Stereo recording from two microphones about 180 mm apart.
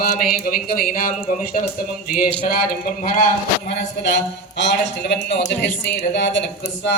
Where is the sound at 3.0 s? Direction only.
50° left (ahead or behind).